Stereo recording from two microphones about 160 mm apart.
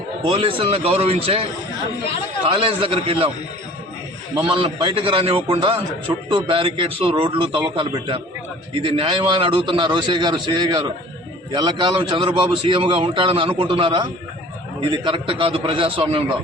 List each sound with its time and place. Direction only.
0.3 s a man's voice: 35° right (ahead or behind)
4.4 s a man's voice: 35° right (ahead or behind)